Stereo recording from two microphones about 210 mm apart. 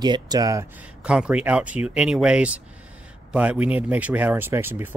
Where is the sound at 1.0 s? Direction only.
5° right (ahead or behind).